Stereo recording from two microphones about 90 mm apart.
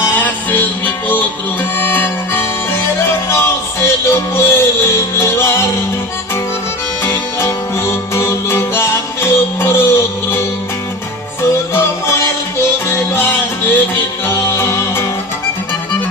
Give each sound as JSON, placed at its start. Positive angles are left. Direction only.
{"t": 0.0, "sound": "music", "side_deg": 20}
{"t": 7.0, "sound": "music", "side_deg": 30}
{"t": 11.7, "sound": "music", "side_deg": 25}